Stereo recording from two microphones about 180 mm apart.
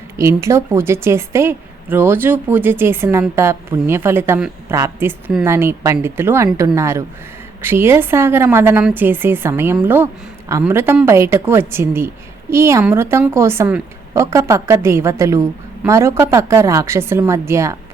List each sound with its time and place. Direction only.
0.2 s a woman's voice: 15° right (ahead or behind)